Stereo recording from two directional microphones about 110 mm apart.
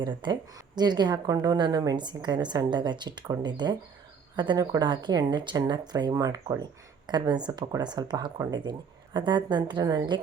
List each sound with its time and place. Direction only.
0.0 s a woman's voice: 45° right (ahead or behind)